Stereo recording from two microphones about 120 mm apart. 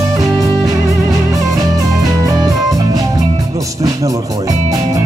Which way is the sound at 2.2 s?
30° right (ahead or behind).